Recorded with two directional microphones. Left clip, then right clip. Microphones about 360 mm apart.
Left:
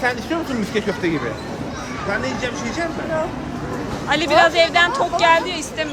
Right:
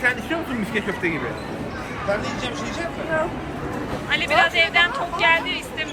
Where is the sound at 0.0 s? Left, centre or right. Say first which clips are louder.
Left 1 dB; left.